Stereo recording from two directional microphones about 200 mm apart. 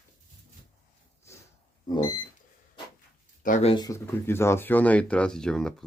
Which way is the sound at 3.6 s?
20° left (ahead or behind).